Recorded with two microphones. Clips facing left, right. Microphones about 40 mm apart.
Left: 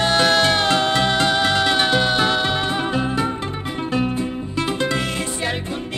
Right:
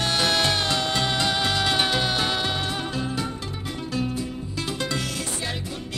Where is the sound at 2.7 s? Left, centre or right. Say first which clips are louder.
Left 7 dB; left.